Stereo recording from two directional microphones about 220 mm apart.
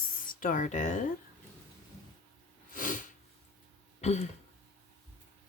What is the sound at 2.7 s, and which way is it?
Sneeze, 35° left (ahead or behind).